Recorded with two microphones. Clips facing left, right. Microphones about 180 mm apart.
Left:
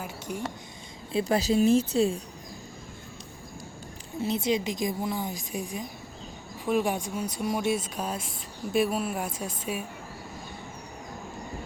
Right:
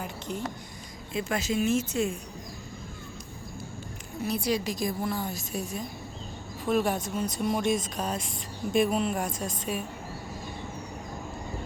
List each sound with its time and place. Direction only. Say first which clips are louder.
0.0 s a sound: even; 10° left (ahead or behind)
1.1 s speech: left 5 dB; 35° left (ahead or behind)
4.2 s a woman's voice: left 2 dB; 20° left (ahead or behind)